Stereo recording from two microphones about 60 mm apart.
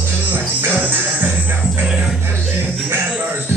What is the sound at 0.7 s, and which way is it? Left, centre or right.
Music, right.